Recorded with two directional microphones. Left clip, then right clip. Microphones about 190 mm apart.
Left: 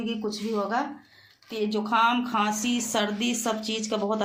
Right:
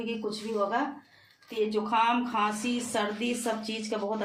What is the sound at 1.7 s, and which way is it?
A woman's voice, 50° left (ahead or behind).